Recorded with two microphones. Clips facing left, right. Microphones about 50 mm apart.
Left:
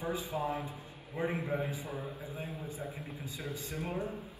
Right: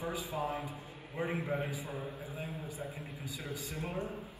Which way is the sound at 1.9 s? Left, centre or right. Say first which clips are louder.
Left 1 dB; left.